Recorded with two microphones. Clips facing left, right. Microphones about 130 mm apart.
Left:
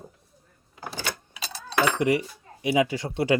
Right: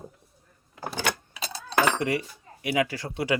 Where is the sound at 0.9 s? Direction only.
65° right (ahead or behind).